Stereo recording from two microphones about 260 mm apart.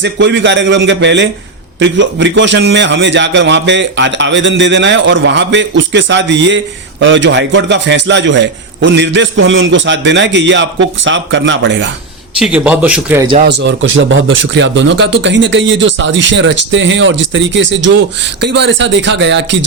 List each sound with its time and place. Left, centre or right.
0.0 s speech: right
12.4 s a man's voice: centre
13.5 s speech: right